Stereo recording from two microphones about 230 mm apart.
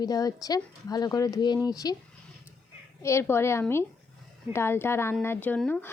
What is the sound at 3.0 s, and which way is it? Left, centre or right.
Speech, centre.